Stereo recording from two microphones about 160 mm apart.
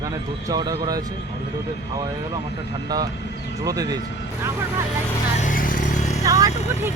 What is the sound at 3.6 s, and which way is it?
Speech, 25° right (ahead or behind).